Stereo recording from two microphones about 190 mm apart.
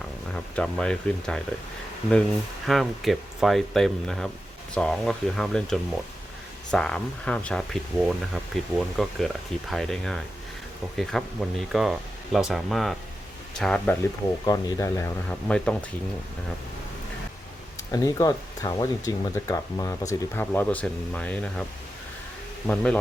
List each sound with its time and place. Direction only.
0.3 s speech: 5° left (ahead or behind)
2.6 s speech: centre (ahead or behind)
14.4 s speech: 20° left (ahead or behind)
15.3 s speech: 5° left (ahead or behind)
17.9 s speech: 20° left (ahead or behind)
22.6 s speech: 5° left (ahead or behind)